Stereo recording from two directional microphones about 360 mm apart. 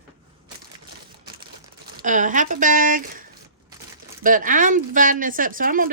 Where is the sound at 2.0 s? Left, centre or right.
Right.